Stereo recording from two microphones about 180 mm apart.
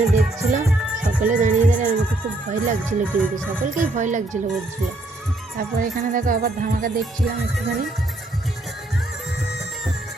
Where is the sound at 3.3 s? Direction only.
45° right (ahead or behind).